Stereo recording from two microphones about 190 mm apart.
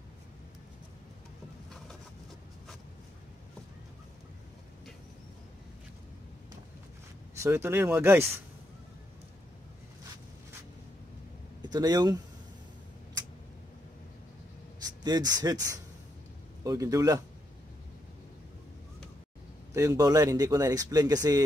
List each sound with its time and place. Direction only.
7.3 s speech: 15° right (ahead or behind)
11.6 s speech: 20° right (ahead or behind)
15.0 s speech: 20° right (ahead or behind)
16.6 s speech: 20° right (ahead or behind)
19.7 s speech: 15° right (ahead or behind)